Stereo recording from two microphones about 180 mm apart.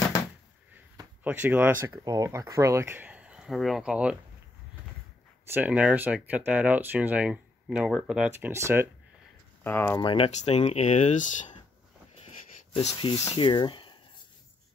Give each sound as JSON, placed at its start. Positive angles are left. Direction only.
{"t": 1.2, "sound": "speech", "side_deg": -10}
{"t": 5.5, "sound": "speech", "side_deg": -10}
{"t": 9.6, "sound": "speech", "side_deg": 10}
{"t": 9.9, "sound": "speech", "side_deg": 30}
{"t": 12.7, "sound": "speech", "side_deg": 30}